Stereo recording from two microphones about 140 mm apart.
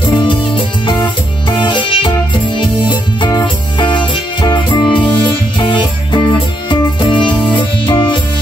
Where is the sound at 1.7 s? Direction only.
35° left (ahead or behind).